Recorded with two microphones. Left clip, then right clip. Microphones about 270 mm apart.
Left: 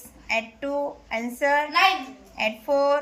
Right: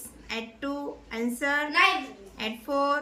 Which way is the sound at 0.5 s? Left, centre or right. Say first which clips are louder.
Left 6 dB; right.